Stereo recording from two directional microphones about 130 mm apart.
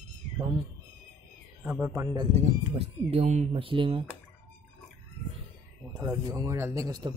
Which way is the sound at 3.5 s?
40° right (ahead or behind).